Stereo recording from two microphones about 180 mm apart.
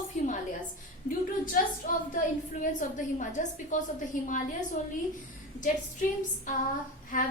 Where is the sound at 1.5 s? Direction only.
50° left (ahead or behind).